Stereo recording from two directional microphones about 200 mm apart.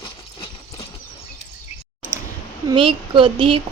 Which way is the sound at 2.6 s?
25° right (ahead or behind).